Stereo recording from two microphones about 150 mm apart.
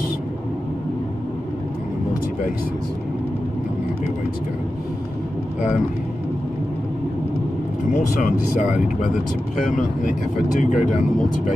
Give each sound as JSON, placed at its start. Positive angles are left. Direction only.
{"t": 7.9, "sound": "speech", "side_deg": 55}